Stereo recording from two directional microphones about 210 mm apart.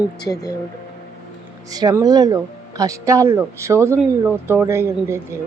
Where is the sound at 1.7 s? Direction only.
15° right (ahead or behind).